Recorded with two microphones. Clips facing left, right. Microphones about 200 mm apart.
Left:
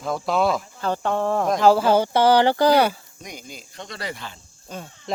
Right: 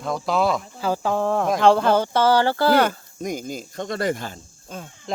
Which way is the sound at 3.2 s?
45° right (ahead or behind).